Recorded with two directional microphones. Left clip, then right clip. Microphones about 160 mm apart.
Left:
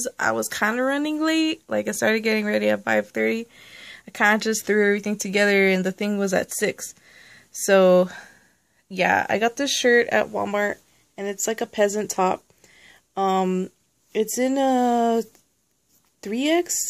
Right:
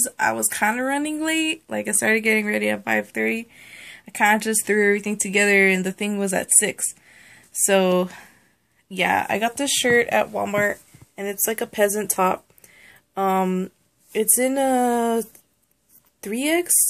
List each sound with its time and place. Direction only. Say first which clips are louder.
0.0 s speech: right 1 dB; 45° left (ahead or behind)